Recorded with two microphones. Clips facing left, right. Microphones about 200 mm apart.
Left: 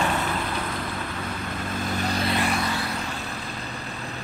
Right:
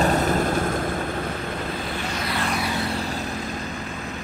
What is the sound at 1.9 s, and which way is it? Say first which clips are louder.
Vehicle: left 2 dB; 35° left (ahead or behind).